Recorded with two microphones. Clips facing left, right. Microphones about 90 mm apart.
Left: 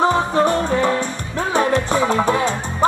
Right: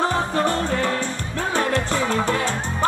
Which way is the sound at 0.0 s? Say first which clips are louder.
Left 5 dB; 15° left (ahead or behind).